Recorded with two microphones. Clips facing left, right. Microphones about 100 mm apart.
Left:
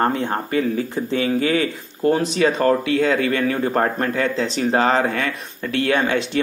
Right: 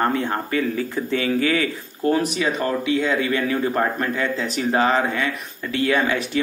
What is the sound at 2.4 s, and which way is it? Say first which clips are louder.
A man's voice: left 5 dB; 45° left (ahead or behind).